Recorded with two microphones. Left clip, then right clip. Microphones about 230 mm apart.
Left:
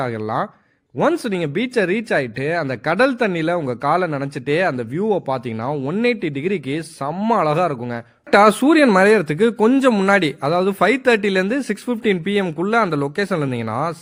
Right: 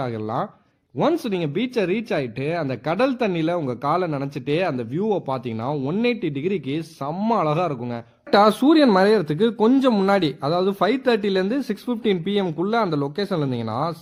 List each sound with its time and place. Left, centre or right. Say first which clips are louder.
0.0 s speech: left 4 dB; left